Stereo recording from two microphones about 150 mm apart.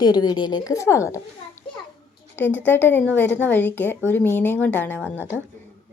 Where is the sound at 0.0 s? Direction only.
30° left (ahead or behind).